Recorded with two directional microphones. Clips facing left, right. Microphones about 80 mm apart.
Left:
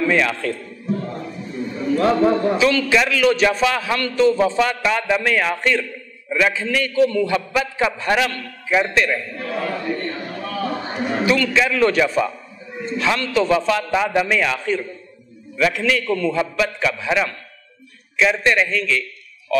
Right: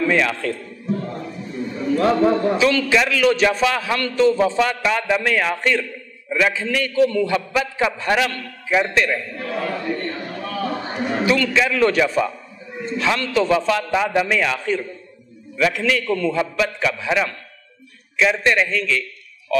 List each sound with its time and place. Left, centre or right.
0.0 s a man's voice: left